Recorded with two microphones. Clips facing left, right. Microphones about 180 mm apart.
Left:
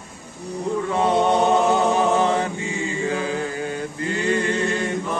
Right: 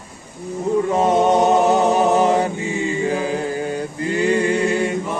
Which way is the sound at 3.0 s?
30° right (ahead or behind).